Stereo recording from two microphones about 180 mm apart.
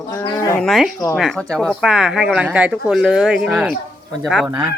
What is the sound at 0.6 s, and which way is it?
Speech, centre (ahead or behind).